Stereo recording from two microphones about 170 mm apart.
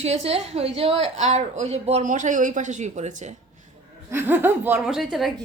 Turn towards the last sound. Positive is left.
turn(degrees=0)  # may be behind; listen again after turning